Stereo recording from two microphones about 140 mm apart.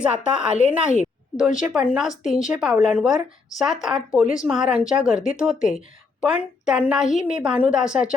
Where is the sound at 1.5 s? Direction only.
5° right (ahead or behind).